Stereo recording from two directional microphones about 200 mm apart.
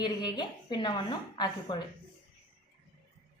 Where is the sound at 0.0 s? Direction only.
20° left (ahead or behind).